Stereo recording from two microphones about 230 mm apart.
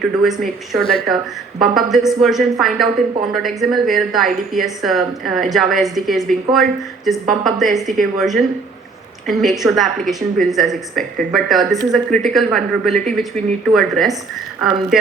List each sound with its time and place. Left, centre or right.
0.0 s a woman's voice: centre